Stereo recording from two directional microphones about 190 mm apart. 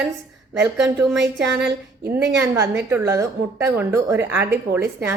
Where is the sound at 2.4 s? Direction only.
10° right (ahead or behind).